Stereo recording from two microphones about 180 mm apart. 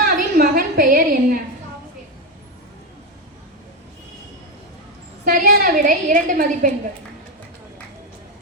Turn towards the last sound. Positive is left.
turn(degrees=-45)  # may be behind; listen again after turning